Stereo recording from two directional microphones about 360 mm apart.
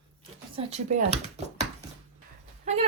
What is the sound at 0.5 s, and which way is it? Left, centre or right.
Speech, centre.